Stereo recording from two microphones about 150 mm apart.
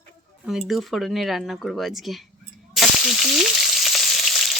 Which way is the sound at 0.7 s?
Centre (ahead or behind).